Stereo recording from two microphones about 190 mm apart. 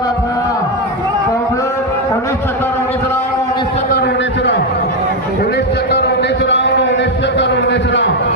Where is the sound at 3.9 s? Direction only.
60° left (ahead or behind).